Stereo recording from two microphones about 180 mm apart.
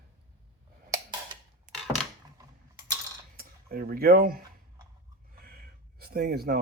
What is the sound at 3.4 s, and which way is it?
Speech, 55° right (ahead or behind).